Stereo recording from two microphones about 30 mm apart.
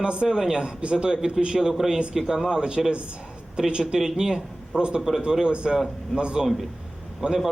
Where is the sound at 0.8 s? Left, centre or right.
Right; by 2.4 s centre.